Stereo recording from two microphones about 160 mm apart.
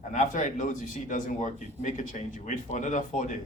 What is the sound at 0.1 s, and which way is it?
Speech, 50° left (ahead or behind).